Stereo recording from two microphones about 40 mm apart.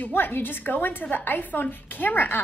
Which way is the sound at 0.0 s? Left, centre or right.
Left.